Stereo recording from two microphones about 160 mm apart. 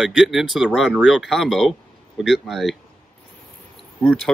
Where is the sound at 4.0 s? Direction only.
10° left (ahead or behind).